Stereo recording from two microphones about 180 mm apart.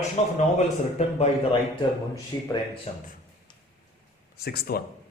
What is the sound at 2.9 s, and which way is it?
Speech, 35° left (ahead or behind).